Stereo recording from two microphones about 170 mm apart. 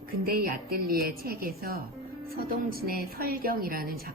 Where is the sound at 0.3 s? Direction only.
60° right (ahead or behind).